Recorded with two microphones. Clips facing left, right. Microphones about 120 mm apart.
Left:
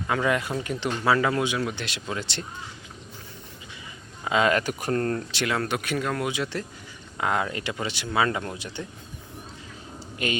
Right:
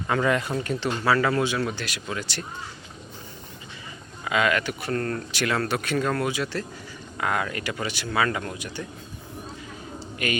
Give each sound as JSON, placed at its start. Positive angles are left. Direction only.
{"t": 0.1, "sound": "speech", "side_deg": 5}
{"t": 4.2, "sound": "speech", "side_deg": 30}
{"t": 4.9, "sound": "speech", "side_deg": 30}
{"t": 10.2, "sound": "speech", "side_deg": 25}